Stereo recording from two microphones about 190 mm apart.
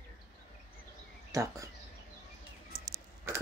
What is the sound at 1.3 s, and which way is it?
Speech, 15° right (ahead or behind).